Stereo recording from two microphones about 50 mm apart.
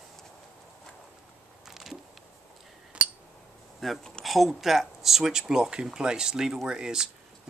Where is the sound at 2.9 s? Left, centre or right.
Right.